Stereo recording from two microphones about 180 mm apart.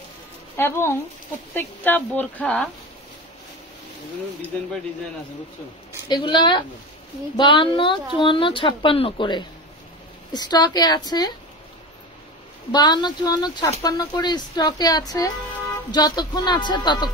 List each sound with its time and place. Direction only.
0.6 s speech: 15° left (ahead or behind)
6.0 s speech: 25° left (ahead or behind)
12.7 s speech: 25° left (ahead or behind)